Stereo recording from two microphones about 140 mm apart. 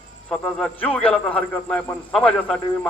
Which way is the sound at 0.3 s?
10° left (ahead or behind).